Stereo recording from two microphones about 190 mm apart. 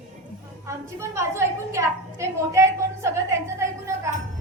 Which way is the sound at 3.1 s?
15° right (ahead or behind).